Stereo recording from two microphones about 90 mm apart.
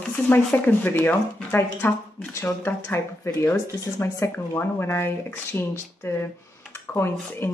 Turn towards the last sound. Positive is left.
turn(degrees=25)  # may be behind; listen again after turning